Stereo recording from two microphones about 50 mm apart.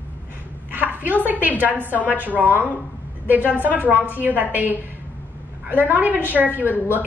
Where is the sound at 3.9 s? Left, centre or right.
Left.